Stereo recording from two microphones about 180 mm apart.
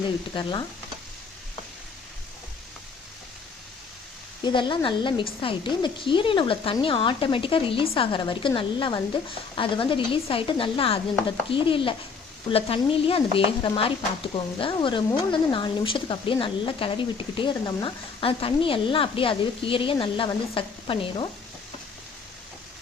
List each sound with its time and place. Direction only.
4.4 s speech: 25° left (ahead or behind)